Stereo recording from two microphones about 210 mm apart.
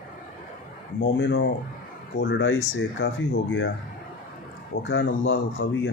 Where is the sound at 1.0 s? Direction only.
55° left (ahead or behind).